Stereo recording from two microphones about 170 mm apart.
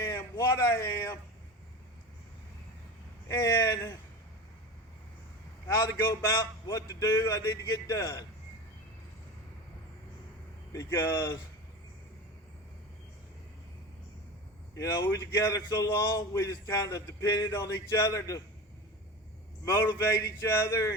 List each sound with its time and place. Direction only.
0.0 s a sound: 15° left (ahead or behind)
3.2 s a man's voice: 20° left (ahead or behind)
5.6 s a man's voice: 15° left (ahead or behind)
10.7 s speech: 20° left (ahead or behind)
14.8 s a man's voice: 15° left (ahead or behind)
19.6 s a man's voice: 20° left (ahead or behind)